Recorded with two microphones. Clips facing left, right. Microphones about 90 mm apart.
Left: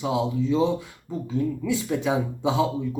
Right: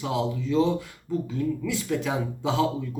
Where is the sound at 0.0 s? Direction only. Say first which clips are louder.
Left 3 dB; 20° left (ahead or behind).